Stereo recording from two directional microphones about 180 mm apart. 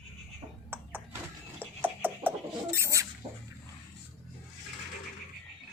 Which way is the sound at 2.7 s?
15° right (ahead or behind).